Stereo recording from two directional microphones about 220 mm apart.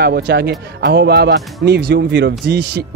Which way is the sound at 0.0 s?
50° right (ahead or behind).